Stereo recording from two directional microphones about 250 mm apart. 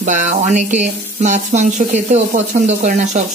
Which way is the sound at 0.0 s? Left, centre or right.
Right.